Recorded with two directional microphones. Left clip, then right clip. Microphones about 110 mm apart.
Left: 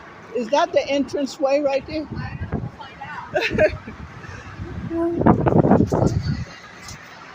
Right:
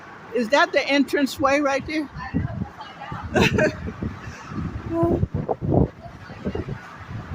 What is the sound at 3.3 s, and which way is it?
Speech, 30° right (ahead or behind).